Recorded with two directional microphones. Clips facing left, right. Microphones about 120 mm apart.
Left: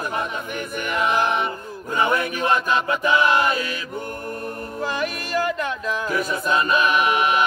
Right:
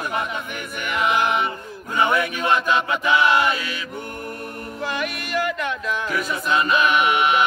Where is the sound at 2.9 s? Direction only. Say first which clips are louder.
Left 1 dB; 40° left (ahead or behind).